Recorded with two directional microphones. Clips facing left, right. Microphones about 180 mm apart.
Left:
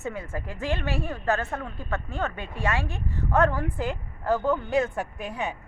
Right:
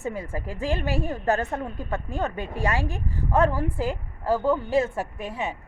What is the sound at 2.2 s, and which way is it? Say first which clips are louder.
Speech: right 2 dB; 40° right (ahead or behind).